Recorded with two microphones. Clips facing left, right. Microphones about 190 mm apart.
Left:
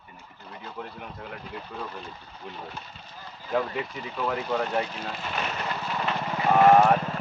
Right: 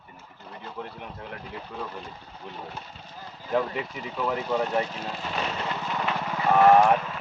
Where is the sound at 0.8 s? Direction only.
Centre (ahead or behind).